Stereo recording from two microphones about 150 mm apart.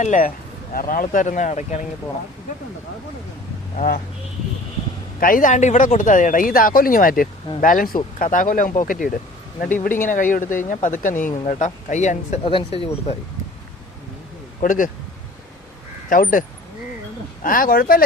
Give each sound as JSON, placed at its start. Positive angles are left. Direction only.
{"t": 0.0, "sound": "speech", "side_deg": 55}
{"t": 0.7, "sound": "speech", "side_deg": 70}
{"t": 5.2, "sound": "speech", "side_deg": 65}
{"t": 12.5, "sound": "speech", "side_deg": 35}
{"t": 14.6, "sound": "speech", "side_deg": 65}
{"t": 16.0, "sound": "speech", "side_deg": 65}
{"t": 17.4, "sound": "speech", "side_deg": 70}